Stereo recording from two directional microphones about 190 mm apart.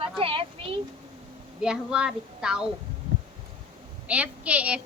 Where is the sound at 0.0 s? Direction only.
30° right (ahead or behind).